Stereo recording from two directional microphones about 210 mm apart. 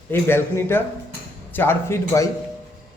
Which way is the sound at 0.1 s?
10° left (ahead or behind).